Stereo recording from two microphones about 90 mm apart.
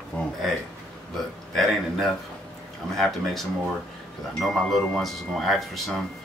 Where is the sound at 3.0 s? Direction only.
Centre (ahead or behind).